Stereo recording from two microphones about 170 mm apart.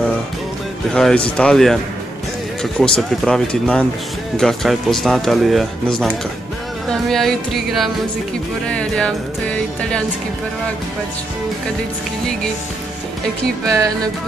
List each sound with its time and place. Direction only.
0.9 s speech: 5° left (ahead or behind)
13.7 s speech: 20° right (ahead or behind)